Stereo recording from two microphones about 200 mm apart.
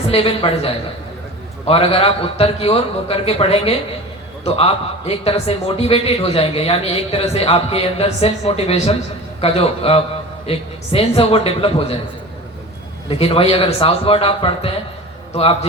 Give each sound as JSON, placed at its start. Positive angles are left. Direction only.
{"t": 0.1, "sound": "a man's voice", "side_deg": 30}
{"t": 13.1, "sound": "a man's voice", "side_deg": 30}